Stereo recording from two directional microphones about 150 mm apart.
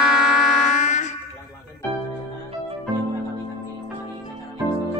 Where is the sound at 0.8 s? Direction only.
50° left (ahead or behind).